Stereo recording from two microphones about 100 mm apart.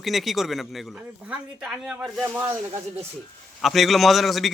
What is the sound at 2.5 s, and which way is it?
Speech, 25° right (ahead or behind).